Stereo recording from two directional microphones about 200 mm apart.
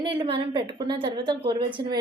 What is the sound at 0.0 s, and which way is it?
A woman's voice, 25° right (ahead or behind).